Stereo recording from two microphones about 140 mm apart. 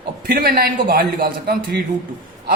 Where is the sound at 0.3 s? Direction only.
90° right.